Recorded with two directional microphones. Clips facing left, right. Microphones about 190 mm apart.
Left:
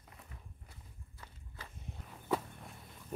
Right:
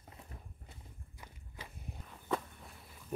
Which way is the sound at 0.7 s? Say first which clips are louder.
Right 2 dB; 15° right (ahead or behind).